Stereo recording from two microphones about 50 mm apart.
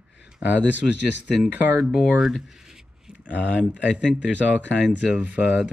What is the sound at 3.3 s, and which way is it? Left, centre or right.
Speech, right.